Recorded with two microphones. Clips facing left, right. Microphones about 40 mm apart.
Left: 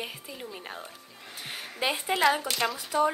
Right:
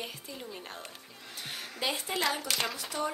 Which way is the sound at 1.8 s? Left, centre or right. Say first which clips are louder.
Left 6 dB; left.